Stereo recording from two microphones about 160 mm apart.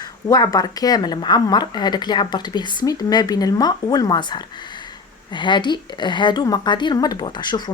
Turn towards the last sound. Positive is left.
turn(degrees=30)  # may be behind; listen again after turning